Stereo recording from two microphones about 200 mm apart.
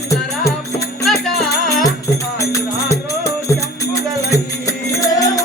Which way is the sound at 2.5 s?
15° left (ahead or behind).